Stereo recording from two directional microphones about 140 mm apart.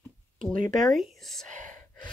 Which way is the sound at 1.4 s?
65° right (ahead or behind).